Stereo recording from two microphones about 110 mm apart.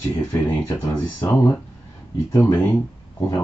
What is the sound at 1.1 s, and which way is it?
Speech, 30° left (ahead or behind).